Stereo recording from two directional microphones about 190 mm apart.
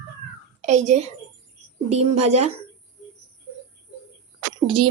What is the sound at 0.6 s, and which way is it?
A woman's voice, 40° right (ahead or behind).